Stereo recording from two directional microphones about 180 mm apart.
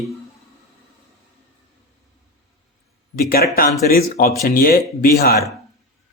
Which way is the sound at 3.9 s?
55° left (ahead or behind).